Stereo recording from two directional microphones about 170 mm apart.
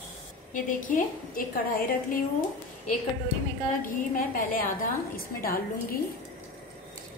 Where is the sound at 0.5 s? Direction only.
50° left (ahead or behind).